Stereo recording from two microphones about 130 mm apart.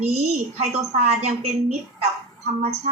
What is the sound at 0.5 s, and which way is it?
A woman's voice, 55° right (ahead or behind).